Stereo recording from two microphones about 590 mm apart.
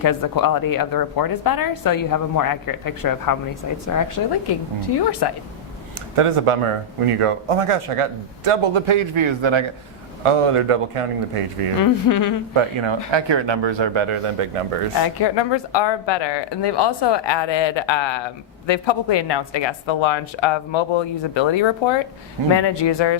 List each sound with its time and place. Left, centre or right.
0.0 s a woman's voice: left
6.1 s a man's voice: right
11.8 s a woman's voice: left
12.5 s speech: right
15.2 s speech: left